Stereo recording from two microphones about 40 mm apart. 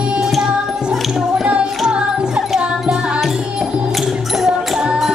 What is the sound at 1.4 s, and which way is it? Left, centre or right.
Music, right.